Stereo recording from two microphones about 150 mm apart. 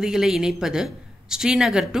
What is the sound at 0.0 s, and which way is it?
A woman's voice, 5° right (ahead or behind).